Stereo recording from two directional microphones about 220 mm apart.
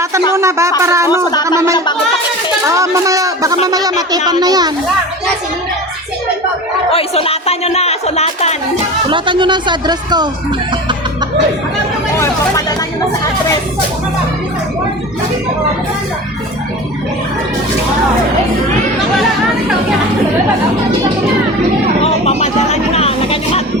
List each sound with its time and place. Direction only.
0.3 s speech: 15° right (ahead or behind)
6.9 s speech: 25° left (ahead or behind)
9.0 s speech: 20° right (ahead or behind)
22.0 s music: 30° left (ahead or behind)